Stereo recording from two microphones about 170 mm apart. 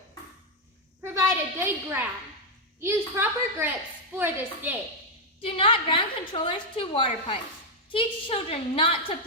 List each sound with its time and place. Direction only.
1.0 s a sound: 15° right (ahead or behind)
3.2 s a woman's voice: 10° right (ahead or behind)
5.4 s a woman's voice: 30° left (ahead or behind)